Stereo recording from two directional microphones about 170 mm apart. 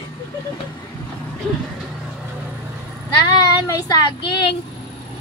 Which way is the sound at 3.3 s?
20° left (ahead or behind).